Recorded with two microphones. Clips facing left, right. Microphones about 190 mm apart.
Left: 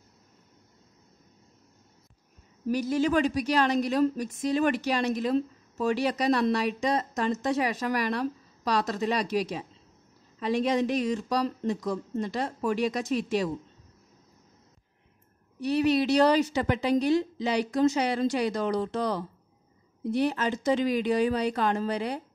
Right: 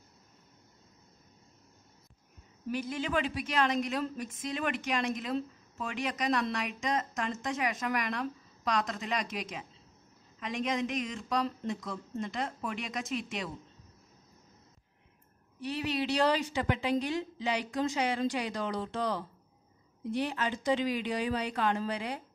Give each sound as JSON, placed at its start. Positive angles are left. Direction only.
{"t": 2.7, "sound": "a woman's voice", "side_deg": 40}
{"t": 15.6, "sound": "a woman's voice", "side_deg": 40}